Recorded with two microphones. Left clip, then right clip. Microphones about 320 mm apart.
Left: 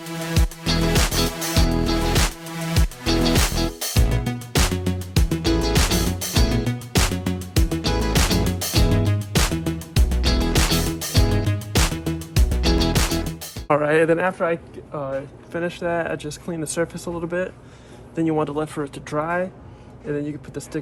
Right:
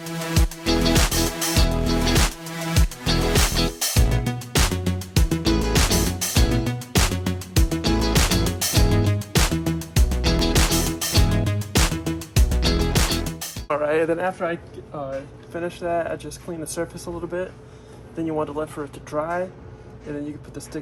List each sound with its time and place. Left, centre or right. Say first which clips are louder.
0.0 s music: even; centre
13.7 s music: left 4 dB; left
14.3 s speech: left 3 dB; centre